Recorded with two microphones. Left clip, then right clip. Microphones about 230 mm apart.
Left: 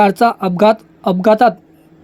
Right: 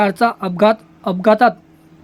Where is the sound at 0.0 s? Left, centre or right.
Centre.